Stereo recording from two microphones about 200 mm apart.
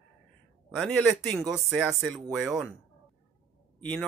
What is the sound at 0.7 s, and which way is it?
Speech, 5° left (ahead or behind).